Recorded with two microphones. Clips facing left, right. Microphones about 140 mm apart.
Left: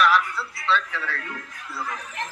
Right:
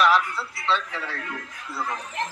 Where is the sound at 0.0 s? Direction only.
20° right (ahead or behind).